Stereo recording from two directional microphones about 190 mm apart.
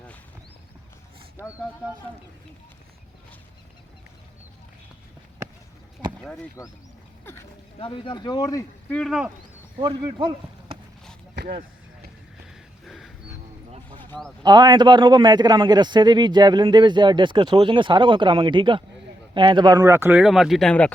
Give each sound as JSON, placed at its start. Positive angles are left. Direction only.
{"t": 6.6, "sound": "speech", "side_deg": 15}
{"t": 7.8, "sound": "speech", "side_deg": 25}
{"t": 8.9, "sound": "speech", "side_deg": 5}
{"t": 9.8, "sound": "speech", "side_deg": -25}
{"t": 11.3, "sound": "speech", "side_deg": -50}
{"t": 12.8, "sound": "a sound", "side_deg": 0}
{"t": 13.7, "sound": "a sound", "side_deg": -30}
{"t": 14.1, "sound": "speech", "side_deg": 5}
{"t": 14.4, "sound": "a man's voice", "side_deg": -20}